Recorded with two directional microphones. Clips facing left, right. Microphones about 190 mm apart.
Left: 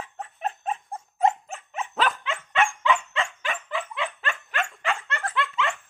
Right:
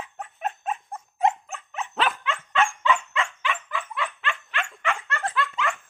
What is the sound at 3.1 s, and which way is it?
Dog, 35° left (ahead or behind).